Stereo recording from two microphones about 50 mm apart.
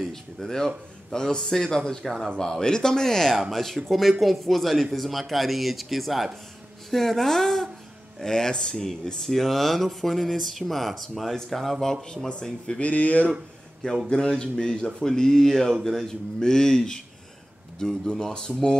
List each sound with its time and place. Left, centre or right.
0.1 s a man's voice: centre
12.8 s speech: left
14.0 s a man's voice: centre